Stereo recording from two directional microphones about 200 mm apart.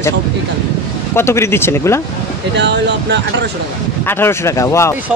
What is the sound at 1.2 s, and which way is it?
Speech, 15° left (ahead or behind).